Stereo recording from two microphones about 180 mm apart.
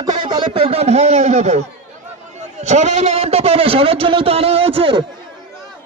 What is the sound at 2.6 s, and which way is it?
A man's voice, 40° right (ahead or behind).